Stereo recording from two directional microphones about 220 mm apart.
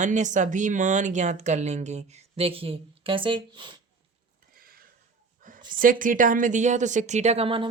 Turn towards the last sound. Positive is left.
turn(degrees=-25)  # may be behind; listen again after turning